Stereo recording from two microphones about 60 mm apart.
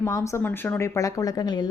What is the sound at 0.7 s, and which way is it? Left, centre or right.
Speech, left.